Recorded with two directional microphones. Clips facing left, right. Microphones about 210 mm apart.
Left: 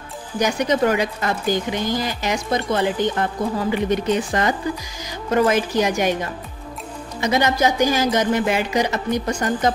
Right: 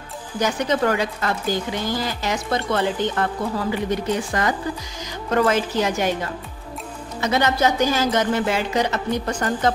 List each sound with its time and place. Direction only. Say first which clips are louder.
0.4 s speech: left 2 dB; 15° left (ahead or behind)
7.2 s speech: left 1 dB; 15° left (ahead or behind)